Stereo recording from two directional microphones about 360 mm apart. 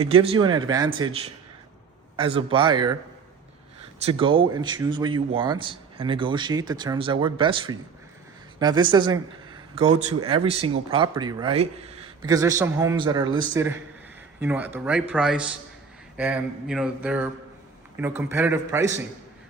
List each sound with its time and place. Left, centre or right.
0.1 s a man's voice: centre
4.0 s a man's voice: centre
14.4 s a sound: centre
17.9 s a man's voice: centre